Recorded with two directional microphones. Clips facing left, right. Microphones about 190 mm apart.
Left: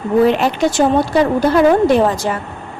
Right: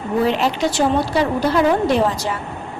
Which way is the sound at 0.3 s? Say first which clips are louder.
Left 4 dB; 55° left (ahead or behind).